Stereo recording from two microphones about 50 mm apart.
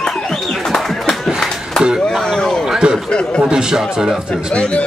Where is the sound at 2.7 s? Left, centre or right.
Centre.